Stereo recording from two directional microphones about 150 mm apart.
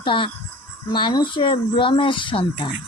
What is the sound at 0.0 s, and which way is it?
Speech, 35° left (ahead or behind).